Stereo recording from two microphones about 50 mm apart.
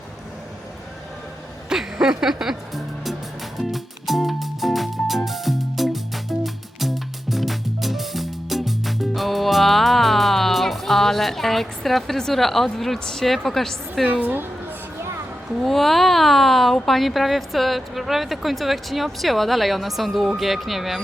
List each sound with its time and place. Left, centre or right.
1.7 s music: centre
14.1 s a woman's voice: right
15.6 s speech: centre